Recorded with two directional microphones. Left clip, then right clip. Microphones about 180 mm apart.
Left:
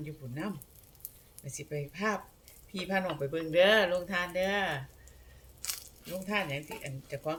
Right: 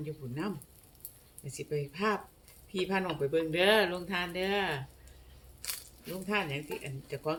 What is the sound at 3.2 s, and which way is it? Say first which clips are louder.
Speech: left 2 dB; 15° left (ahead or behind).